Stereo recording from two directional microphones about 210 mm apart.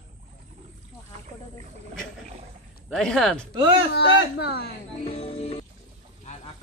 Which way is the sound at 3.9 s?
50° left (ahead or behind).